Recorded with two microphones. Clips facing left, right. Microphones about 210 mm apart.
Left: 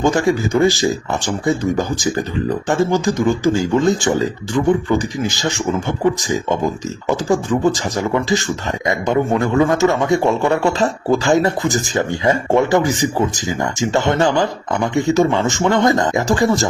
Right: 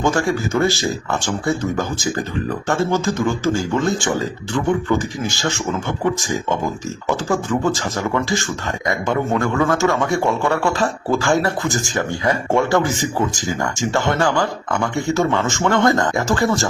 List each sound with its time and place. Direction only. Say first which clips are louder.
0.0 s a man's voice: left 3 dB; 15° left (ahead or behind)